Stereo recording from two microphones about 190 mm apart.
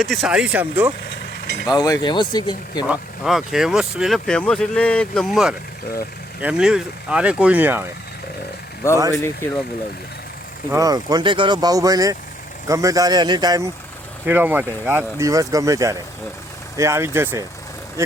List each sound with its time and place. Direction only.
0.0 s speech: centre (ahead or behind)
1.6 s speech: 20° left (ahead or behind)
2.8 s speech: 5° right (ahead or behind)
9.1 s speech: 15° left (ahead or behind)
10.7 s speech: 20° right (ahead or behind)
14.3 s speech: 10° right (ahead or behind)